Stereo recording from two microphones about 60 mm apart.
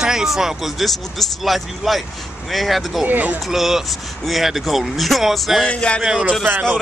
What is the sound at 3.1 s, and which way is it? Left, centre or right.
Speech, right.